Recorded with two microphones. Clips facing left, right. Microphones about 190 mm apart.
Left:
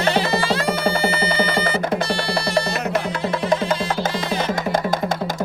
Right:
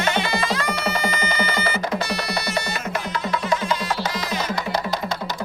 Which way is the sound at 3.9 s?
50° left (ahead or behind).